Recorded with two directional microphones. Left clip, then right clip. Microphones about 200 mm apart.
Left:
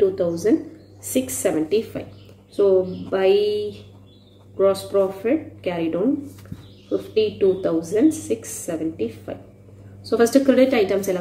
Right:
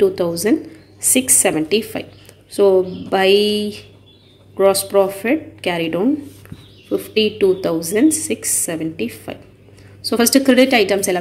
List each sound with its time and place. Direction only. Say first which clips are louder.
0.0 s a woman's voice: right 3 dB; 40° right (ahead or behind)